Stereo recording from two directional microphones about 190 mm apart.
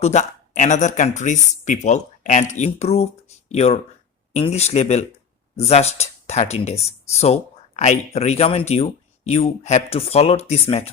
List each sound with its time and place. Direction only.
0.0 s speech: 35° left (ahead or behind)